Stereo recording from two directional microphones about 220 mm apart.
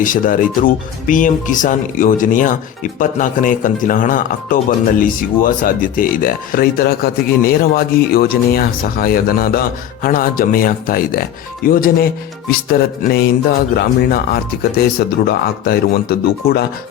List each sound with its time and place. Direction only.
0.0 s speech: 40° left (ahead or behind)
14.6 s speech: 45° left (ahead or behind)